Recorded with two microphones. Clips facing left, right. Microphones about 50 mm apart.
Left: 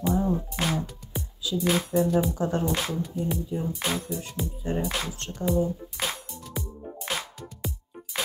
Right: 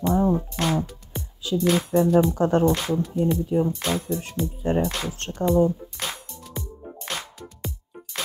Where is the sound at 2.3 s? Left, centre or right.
Right.